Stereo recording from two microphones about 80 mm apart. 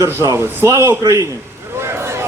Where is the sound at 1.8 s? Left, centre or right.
Right.